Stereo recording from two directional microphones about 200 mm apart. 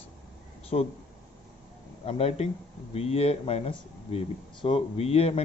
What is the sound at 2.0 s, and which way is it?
A man's voice, 30° left (ahead or behind).